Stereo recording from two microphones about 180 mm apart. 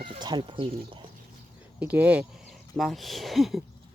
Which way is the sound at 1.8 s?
10° right (ahead or behind).